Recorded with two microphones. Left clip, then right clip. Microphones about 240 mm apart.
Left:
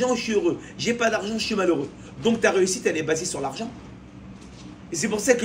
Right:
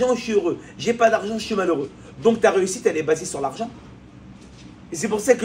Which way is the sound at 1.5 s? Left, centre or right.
Right.